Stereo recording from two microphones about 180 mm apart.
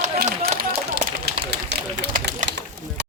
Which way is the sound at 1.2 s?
70° right (ahead or behind).